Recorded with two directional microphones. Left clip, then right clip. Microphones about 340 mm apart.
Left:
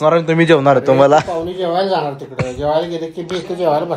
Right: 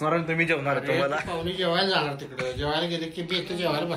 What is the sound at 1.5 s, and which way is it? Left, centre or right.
A man's voice, centre.